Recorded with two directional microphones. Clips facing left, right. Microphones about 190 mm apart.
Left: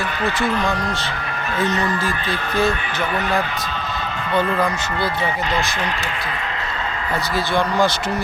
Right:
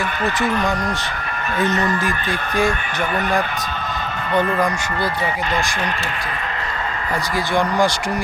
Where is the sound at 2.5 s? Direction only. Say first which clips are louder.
Even; 15° right (ahead or behind).